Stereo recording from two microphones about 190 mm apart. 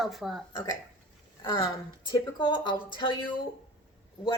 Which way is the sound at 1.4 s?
20° left (ahead or behind).